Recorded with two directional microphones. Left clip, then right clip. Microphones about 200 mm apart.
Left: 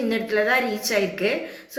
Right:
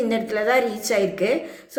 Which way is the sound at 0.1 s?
60° right (ahead or behind).